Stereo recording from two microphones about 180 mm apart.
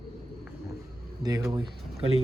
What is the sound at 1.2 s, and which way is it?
Speech, 20° right (ahead or behind).